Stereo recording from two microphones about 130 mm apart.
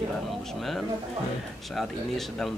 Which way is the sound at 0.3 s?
Centre (ahead or behind).